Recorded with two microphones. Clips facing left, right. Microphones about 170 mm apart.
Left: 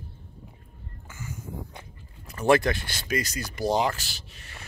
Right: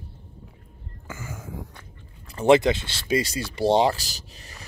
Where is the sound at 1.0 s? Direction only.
90° right.